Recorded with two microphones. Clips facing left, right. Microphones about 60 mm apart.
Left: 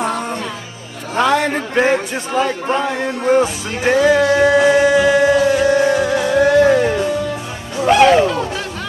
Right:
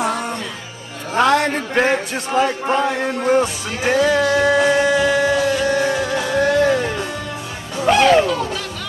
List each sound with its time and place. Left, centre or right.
0.0 s music: centre
1.1 s a man's voice: centre
4.4 s music: centre
5.4 s music: centre
6.6 s music: centre